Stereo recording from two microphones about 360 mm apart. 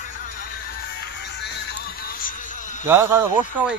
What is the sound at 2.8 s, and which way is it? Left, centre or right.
Speech, centre.